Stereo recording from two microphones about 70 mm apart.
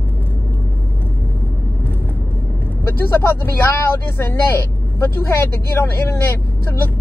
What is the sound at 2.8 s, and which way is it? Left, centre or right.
Speech, left.